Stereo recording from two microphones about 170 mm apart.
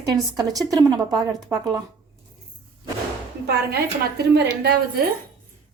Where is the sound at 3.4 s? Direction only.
70° right (ahead or behind).